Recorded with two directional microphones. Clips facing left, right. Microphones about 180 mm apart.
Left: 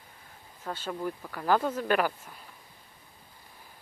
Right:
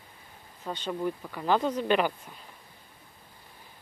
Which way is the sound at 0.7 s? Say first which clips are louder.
Right 2 dB; 5° right (ahead or behind).